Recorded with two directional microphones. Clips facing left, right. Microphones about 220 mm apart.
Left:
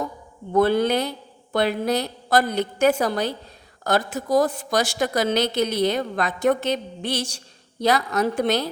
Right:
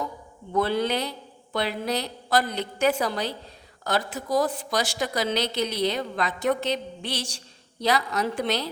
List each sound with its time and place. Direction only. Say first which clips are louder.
0.5 s a woman's voice: left 6 dB; 50° left (ahead or behind)